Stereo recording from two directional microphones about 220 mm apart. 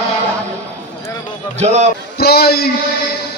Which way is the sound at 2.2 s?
45° left (ahead or behind).